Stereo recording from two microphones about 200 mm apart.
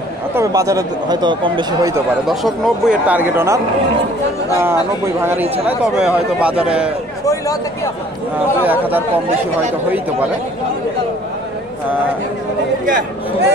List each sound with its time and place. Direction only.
0.3 s speech: 15° right (ahead or behind)
2.2 s speech: centre (ahead or behind)
5.2 s a man's voice: 10° right (ahead or behind)
7.2 s speech: 15° left (ahead or behind)
8.6 s speech: 10° right (ahead or behind)
12.8 s speech: 45° right (ahead or behind)